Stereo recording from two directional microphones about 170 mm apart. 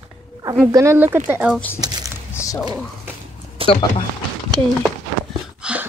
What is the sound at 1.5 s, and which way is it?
Speech, 10° left (ahead or behind).